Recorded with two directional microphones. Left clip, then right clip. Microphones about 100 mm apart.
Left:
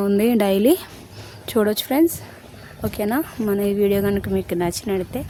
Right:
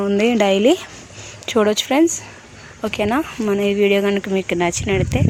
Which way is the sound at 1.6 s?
5° left (ahead or behind).